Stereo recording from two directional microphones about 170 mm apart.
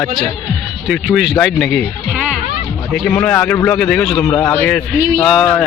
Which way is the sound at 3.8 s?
5° left (ahead or behind).